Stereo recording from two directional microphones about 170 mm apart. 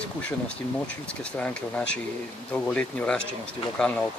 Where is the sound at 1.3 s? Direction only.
5° left (ahead or behind).